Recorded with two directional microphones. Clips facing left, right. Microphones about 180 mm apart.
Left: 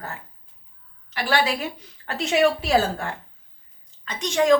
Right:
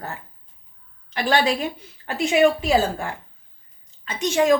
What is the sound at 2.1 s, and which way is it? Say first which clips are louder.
Speech: right 2 dB; 5° right (ahead or behind).